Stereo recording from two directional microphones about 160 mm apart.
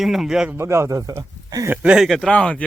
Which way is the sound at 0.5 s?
15° right (ahead or behind).